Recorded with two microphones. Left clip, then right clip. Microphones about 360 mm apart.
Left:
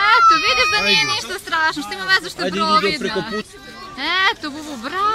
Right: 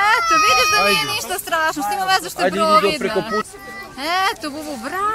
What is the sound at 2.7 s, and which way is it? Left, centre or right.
Speech, centre.